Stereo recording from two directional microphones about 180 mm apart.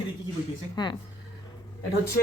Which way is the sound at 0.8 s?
25° left (ahead or behind).